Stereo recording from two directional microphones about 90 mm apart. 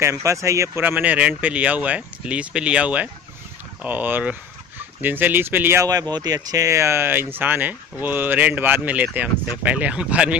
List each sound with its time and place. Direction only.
0.0 s speech: 35° right (ahead or behind)
0.8 s speech: 15° right (ahead or behind)
5.9 s speech: 45° right (ahead or behind); by 10.3 s 10° right (ahead or behind)